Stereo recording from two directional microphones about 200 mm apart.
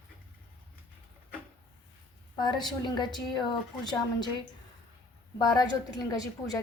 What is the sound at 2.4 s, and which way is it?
A woman's voice, 20° left (ahead or behind).